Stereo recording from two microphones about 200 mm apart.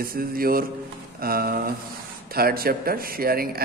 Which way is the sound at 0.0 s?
45° right (ahead or behind).